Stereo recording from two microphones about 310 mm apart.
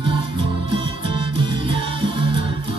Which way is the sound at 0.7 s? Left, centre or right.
Centre.